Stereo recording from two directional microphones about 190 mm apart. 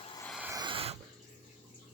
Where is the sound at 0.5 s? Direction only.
25° right (ahead or behind).